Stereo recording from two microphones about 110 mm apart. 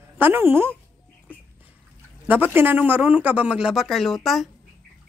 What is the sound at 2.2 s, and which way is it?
Speech, 15° right (ahead or behind).